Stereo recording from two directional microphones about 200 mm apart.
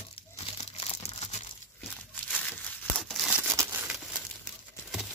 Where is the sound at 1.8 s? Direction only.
5° left (ahead or behind).